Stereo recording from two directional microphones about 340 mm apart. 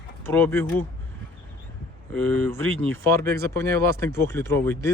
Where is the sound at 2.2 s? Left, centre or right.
Right.